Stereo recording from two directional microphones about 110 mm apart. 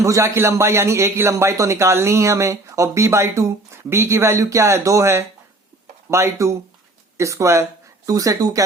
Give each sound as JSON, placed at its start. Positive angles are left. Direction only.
{"t": 0.0, "sound": "a man's voice", "side_deg": -25}